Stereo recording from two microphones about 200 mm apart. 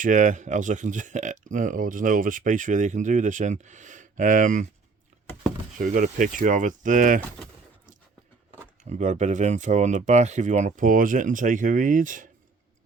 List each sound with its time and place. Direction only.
0.0 s speech: 40° right (ahead or behind)
5.7 s speech: 40° right (ahead or behind)
8.8 s speech: 35° right (ahead or behind)